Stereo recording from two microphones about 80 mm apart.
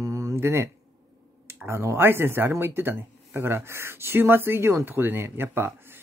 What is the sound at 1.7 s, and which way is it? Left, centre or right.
Speech, right.